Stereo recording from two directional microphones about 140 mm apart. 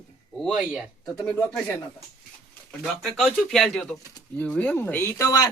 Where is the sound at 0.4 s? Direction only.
5° right (ahead or behind).